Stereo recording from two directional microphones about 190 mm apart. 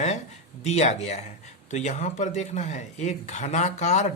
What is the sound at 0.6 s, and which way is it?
Speech, 35° left (ahead or behind).